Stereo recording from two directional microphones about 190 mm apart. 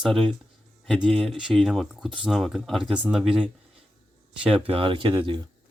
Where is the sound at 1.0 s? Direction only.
5° left (ahead or behind).